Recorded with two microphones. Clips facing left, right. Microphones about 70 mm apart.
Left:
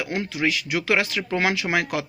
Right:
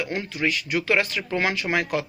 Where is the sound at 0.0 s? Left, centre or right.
Left.